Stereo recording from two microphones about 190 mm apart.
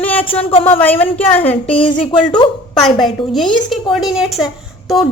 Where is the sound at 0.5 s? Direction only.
30° left (ahead or behind).